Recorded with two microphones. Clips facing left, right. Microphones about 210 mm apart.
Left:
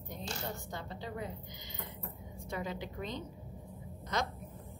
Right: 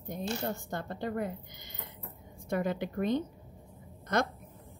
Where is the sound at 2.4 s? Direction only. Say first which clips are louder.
Right 8 dB; 55° right (ahead or behind).